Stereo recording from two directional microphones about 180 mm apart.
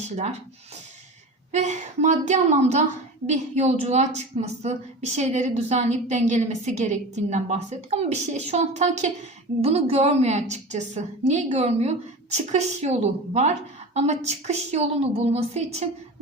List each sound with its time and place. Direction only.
1.5 s a woman's voice: 40° right (ahead or behind)